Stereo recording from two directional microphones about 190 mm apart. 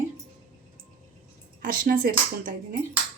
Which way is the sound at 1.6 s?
45° right (ahead or behind).